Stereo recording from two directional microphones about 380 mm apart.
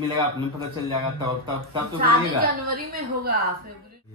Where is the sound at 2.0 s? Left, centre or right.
Right.